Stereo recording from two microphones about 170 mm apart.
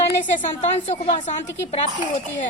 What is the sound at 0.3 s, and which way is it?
A woman's voice, 40° left (ahead or behind).